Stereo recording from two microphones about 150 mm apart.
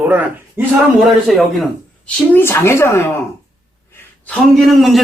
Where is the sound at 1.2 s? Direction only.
Centre (ahead or behind); by 3.0 s 15° left (ahead or behind).